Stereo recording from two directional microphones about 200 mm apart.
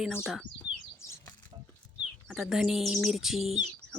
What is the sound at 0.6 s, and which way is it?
Bird, 15° left (ahead or behind).